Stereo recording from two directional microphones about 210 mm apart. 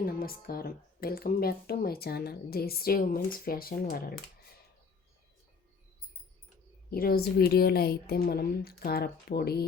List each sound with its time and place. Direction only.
0.0 s speech: 45° left (ahead or behind)
6.9 s speech: 45° left (ahead or behind)